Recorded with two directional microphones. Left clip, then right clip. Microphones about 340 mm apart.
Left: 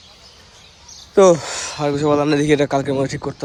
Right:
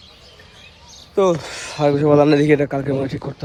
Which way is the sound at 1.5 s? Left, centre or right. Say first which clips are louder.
Right 3 dB; centre.